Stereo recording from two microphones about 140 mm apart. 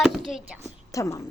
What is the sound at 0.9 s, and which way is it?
Speech, 25° left (ahead or behind).